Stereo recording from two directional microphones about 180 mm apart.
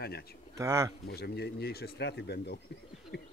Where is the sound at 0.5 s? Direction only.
15° right (ahead or behind).